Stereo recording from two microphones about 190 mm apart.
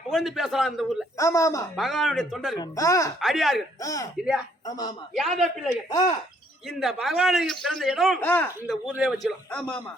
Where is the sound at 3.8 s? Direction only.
15° left (ahead or behind).